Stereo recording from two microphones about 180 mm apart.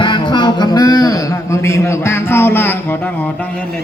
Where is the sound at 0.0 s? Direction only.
25° left (ahead or behind).